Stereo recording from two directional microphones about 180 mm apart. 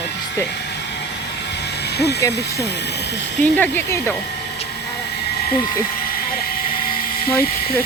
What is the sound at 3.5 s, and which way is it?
Speech, 10° left (ahead or behind).